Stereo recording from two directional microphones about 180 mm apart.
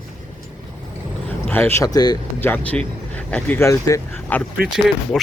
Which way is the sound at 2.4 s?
10° left (ahead or behind).